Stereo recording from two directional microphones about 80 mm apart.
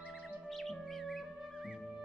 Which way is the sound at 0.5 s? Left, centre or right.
Centre.